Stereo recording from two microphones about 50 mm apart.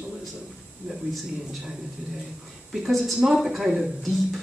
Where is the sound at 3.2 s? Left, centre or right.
Centre.